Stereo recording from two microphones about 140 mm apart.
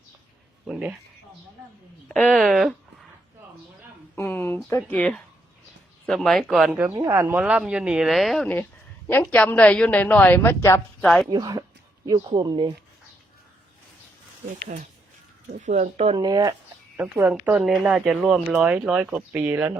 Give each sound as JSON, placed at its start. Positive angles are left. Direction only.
{"t": 0.7, "sound": "speech", "side_deg": -5}
{"t": 2.0, "sound": "speech", "side_deg": 5}
{"t": 4.1, "sound": "a sound", "side_deg": 15}
{"t": 4.9, "sound": "a woman's voice", "side_deg": 10}
{"t": 6.8, "sound": "a woman's voice", "side_deg": -15}
{"t": 11.3, "sound": "speech", "side_deg": -30}
{"t": 15.6, "sound": "speech", "side_deg": -60}
{"t": 16.1, "sound": "speech", "side_deg": -25}
{"t": 17.3, "sound": "speech", "side_deg": -5}